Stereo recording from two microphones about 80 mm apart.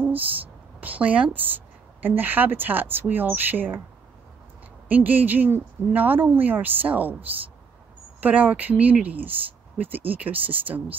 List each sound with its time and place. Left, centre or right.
0.7 s a woman's voice: right
4.8 s a woman's voice: right